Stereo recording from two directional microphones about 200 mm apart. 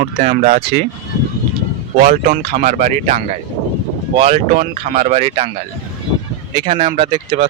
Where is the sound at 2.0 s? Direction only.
45° right (ahead or behind).